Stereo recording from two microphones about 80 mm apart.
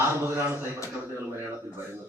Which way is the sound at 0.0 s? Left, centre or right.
Right.